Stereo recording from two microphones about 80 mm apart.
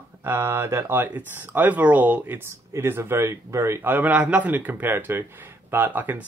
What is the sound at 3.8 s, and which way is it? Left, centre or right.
Speech, right.